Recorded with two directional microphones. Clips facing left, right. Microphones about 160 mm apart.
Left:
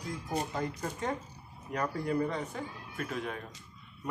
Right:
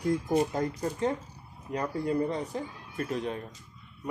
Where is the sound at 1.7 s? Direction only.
30° right (ahead or behind).